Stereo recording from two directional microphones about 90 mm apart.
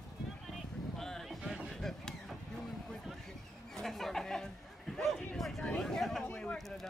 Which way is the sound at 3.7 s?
5° left (ahead or behind).